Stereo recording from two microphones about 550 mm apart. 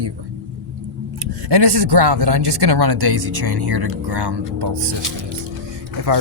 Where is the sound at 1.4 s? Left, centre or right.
Right.